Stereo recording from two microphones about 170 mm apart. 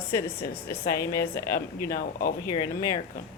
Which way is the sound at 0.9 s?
15° left (ahead or behind).